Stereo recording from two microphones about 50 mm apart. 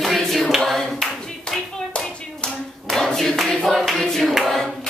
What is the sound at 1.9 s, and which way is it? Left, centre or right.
Hands, centre.